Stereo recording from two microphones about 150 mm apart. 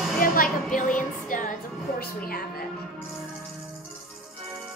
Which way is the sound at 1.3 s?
60° left (ahead or behind).